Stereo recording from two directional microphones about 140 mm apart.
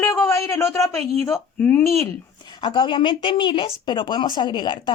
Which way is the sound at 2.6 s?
35° left (ahead or behind).